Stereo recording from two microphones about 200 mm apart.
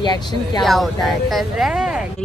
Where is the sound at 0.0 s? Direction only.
20° left (ahead or behind).